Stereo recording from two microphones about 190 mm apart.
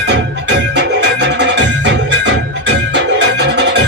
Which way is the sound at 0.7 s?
65° right (ahead or behind).